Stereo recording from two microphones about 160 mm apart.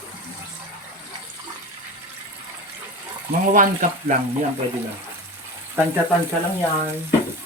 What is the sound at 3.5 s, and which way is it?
Speech, 55° right (ahead or behind).